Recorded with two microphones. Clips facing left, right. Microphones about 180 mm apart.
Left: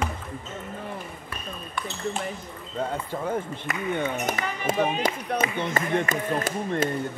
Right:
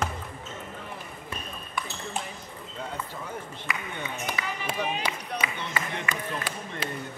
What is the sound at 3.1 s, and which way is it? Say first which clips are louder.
Speech: left 9 dB; 50° left (ahead or behind).